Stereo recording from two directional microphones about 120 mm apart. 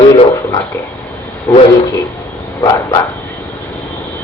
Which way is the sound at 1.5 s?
20° left (ahead or behind).